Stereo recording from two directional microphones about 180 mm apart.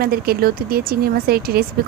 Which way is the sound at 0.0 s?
55° right (ahead or behind).